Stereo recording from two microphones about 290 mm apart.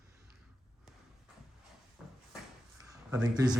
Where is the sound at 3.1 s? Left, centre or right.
Centre.